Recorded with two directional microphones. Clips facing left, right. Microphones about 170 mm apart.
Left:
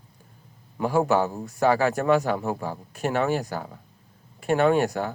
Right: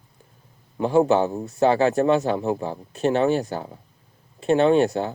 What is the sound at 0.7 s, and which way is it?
A man's voice, 25° right (ahead or behind).